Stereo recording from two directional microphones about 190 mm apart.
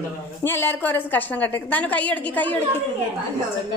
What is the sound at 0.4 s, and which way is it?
A woman's voice, 10° left (ahead or behind).